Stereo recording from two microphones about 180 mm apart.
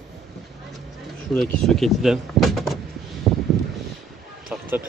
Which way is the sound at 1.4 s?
5° left (ahead or behind).